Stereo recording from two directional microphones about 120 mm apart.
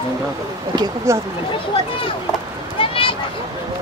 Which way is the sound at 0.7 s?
35° right (ahead or behind).